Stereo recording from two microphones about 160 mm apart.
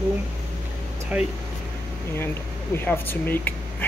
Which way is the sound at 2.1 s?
15° left (ahead or behind).